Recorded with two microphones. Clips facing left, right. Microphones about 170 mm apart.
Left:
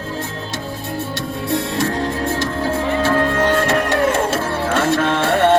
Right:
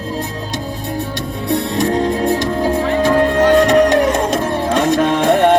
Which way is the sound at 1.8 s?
20° right (ahead or behind).